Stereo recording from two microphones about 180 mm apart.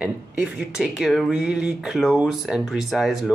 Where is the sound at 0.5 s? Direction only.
5° right (ahead or behind).